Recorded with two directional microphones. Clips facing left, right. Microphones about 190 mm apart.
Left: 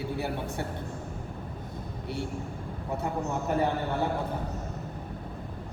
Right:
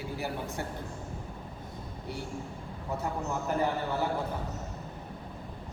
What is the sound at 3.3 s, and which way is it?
Speech, 20° left (ahead or behind).